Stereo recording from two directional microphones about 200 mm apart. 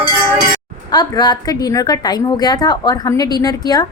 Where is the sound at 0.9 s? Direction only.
20° left (ahead or behind).